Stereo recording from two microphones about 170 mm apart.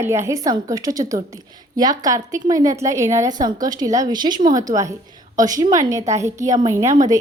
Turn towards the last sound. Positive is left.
turn(degrees=-15)  # may be behind; listen again after turning